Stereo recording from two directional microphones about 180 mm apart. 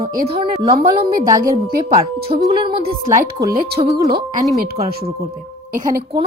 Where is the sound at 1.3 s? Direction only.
20° right (ahead or behind).